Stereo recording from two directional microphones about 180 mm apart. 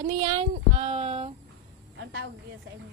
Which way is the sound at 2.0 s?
65° right (ahead or behind).